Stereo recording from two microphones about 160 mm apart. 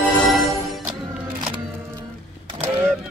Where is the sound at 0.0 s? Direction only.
Centre (ahead or behind).